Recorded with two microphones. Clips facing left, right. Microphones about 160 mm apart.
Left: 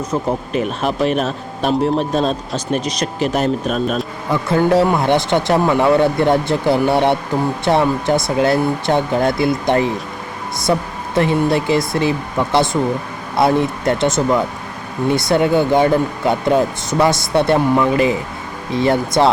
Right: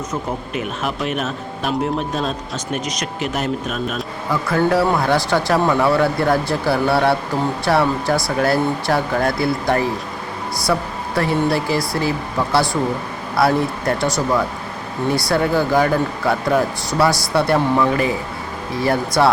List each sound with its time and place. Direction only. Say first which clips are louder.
0.1 s speech: left 5 dB; 35° left (ahead or behind)
4.3 s speech: left 3 dB; 25° left (ahead or behind)